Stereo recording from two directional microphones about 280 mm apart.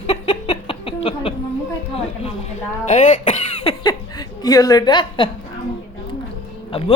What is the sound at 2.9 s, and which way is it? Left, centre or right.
Speech, left.